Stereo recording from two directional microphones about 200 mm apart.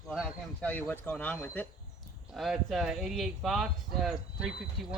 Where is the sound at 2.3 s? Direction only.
Centre (ahead or behind).